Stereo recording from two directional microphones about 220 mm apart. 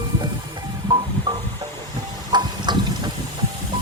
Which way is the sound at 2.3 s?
20° right (ahead or behind).